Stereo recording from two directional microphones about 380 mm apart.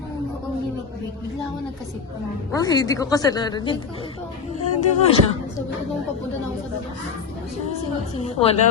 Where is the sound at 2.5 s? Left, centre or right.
Centre.